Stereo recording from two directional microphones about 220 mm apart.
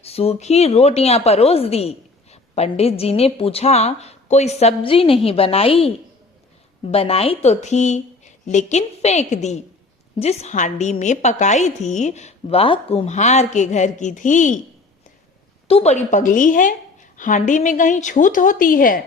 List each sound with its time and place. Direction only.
0.0 s a woman's voice: 25° left (ahead or behind)
15.6 s a woman's voice: 30° left (ahead or behind)